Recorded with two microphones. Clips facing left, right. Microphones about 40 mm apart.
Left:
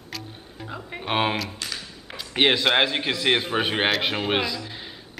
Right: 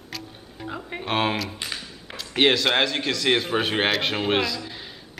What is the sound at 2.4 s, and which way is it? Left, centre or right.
A man's voice, centre.